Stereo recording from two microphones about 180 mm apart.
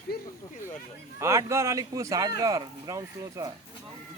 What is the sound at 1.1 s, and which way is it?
Speech, 15° right (ahead or behind).